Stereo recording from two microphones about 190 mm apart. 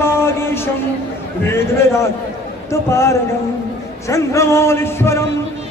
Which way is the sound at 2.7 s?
15° left (ahead or behind).